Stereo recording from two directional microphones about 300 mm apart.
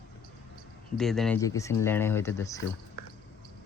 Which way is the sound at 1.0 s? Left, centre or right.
Centre.